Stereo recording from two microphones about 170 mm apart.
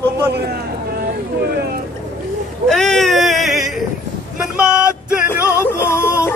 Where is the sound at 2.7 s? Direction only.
5° left (ahead or behind).